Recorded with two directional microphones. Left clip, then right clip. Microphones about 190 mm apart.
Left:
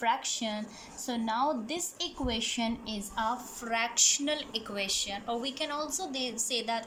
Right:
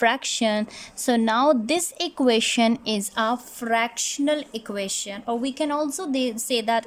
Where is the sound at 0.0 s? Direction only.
65° right (ahead or behind).